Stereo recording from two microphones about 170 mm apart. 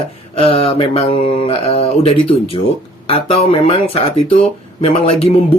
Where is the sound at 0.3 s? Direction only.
35° left (ahead or behind).